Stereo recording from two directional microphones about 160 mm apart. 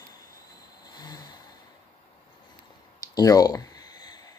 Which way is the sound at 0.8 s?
25° left (ahead or behind).